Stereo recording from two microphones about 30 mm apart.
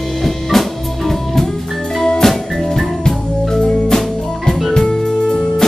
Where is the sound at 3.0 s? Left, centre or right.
Centre.